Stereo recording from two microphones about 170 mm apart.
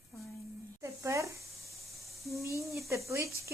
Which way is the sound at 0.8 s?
15° right (ahead or behind).